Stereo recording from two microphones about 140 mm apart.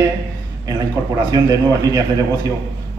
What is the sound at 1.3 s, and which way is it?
Speech, 25° right (ahead or behind).